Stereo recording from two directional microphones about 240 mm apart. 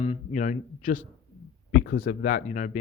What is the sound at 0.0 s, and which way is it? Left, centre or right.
Speech, left.